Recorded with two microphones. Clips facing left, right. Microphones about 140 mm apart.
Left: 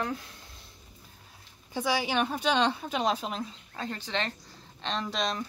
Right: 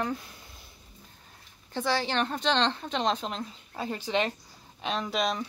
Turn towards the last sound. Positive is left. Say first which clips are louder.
# right 2 dB
turn(degrees=0)  # may be behind; listen again after turning